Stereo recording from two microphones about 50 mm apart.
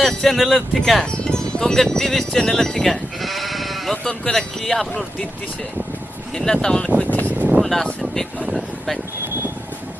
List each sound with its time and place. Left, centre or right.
0.0 s speech: centre
0.3 s speech: centre
0.8 s speech: centre
4.0 s speech: centre
6.3 s speech: centre
7.0 s speech: left
7.3 s a sound: right
7.6 s speech: centre